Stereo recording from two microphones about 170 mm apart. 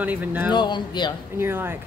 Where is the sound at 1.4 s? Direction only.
15° right (ahead or behind).